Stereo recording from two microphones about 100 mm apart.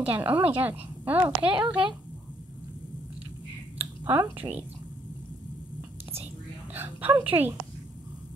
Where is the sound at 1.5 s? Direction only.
55° right (ahead or behind).